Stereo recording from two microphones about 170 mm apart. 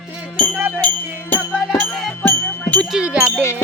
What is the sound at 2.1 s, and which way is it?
Speech, 10° left (ahead or behind).